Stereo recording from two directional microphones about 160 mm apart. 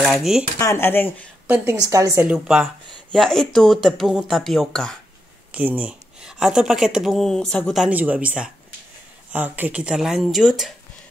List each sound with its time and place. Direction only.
0.0 s speech: centre (ahead or behind)
0.6 s speech: 15° left (ahead or behind)
1.5 s a woman's voice: 10° right (ahead or behind)
2.2 s speech: 5° right (ahead or behind)
5.5 s speech: 10° right (ahead or behind)